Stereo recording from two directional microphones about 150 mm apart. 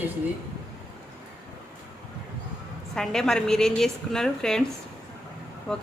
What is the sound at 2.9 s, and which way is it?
A woman's voice, 5° left (ahead or behind).